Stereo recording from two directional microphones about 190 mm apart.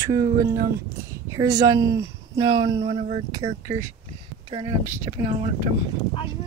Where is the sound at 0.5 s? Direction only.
55° right (ahead or behind).